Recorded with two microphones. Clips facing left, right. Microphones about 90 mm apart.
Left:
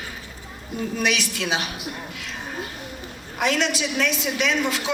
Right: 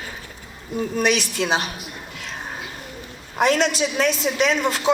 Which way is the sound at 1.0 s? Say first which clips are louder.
Right 4 dB; 40° right (ahead or behind).